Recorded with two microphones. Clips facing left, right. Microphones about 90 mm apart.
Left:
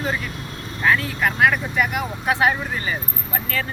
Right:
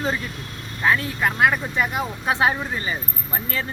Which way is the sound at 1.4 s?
25° right (ahead or behind).